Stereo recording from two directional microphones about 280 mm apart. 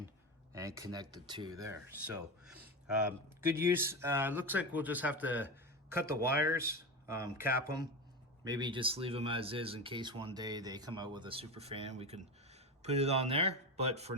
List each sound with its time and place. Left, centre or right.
0.5 s speech: centre